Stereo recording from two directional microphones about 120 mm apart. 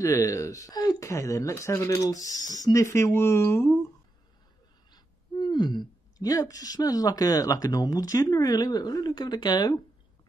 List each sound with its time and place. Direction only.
0.0 s speech: 25° left (ahead or behind)
4.9 s speech: 40° left (ahead or behind)